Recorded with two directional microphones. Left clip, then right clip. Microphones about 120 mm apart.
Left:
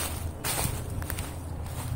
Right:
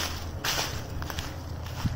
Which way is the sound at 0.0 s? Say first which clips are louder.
Right 3 dB; 20° right (ahead or behind).